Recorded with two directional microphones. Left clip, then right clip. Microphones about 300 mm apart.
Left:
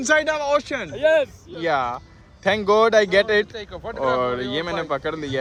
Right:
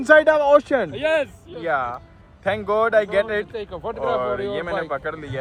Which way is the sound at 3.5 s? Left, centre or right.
Centre.